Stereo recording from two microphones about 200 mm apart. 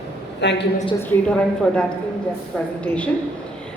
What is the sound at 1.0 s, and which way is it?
A woman's voice, 5° left (ahead or behind).